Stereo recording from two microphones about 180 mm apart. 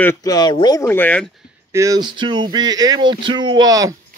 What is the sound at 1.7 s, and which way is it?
Speech, 20° right (ahead or behind).